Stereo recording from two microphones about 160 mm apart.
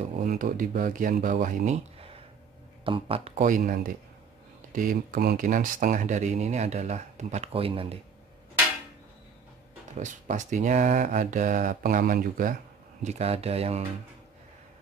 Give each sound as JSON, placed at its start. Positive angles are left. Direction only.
{"t": 0.0, "sound": "speech", "side_deg": -50}
{"t": 2.8, "sound": "speech", "side_deg": -35}
{"t": 3.3, "sound": "speech", "side_deg": -55}
{"t": 9.9, "sound": "speech", "side_deg": -50}
{"t": 13.0, "sound": "speech", "side_deg": -40}